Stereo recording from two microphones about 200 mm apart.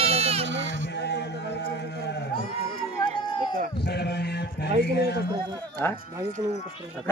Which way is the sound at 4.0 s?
55° left (ahead or behind).